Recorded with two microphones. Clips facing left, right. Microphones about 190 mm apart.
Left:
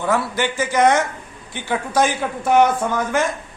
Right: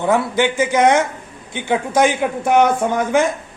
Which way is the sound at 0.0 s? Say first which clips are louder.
Right 4 dB; 20° right (ahead or behind).